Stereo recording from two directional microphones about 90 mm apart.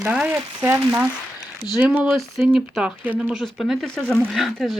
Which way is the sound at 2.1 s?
Centre (ahead or behind).